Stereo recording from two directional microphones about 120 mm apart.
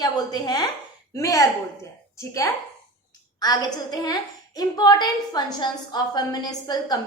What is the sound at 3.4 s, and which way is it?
A woman's voice, 35° left (ahead or behind).